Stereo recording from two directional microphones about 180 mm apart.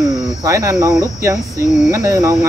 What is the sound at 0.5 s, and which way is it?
Speech, 20° right (ahead or behind).